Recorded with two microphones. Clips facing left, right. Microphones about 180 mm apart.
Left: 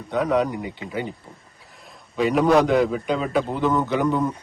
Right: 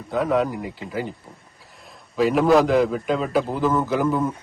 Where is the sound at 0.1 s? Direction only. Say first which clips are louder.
Even; centre (ahead or behind).